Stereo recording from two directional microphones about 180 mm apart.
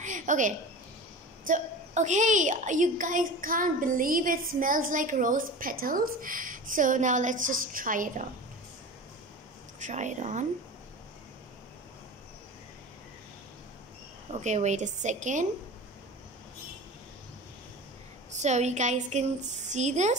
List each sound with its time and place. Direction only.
0.0 s a sound: 45° right (ahead or behind)
1.5 s a woman's voice: 40° right (ahead or behind)
9.8 s a woman's voice: 40° right (ahead or behind)
14.3 s a woman's voice: 40° right (ahead or behind)
18.3 s a woman's voice: 40° right (ahead or behind)